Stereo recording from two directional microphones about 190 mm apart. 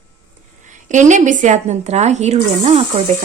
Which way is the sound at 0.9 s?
40° right (ahead or behind).